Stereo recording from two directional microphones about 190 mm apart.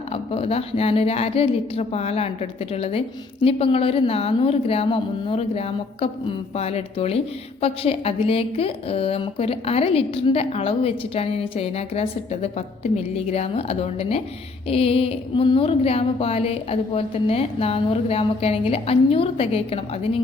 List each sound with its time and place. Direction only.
0.1 s a woman's voice: 30° left (ahead or behind)